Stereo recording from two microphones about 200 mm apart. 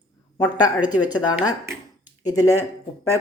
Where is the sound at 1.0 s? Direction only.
20° left (ahead or behind).